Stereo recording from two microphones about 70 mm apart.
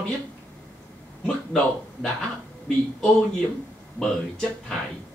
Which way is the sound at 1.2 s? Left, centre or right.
Centre.